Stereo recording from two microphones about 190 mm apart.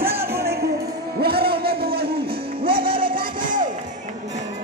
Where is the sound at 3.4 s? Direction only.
45° right (ahead or behind).